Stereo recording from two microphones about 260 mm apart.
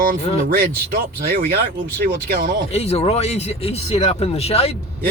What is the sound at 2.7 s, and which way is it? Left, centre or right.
Speech, left.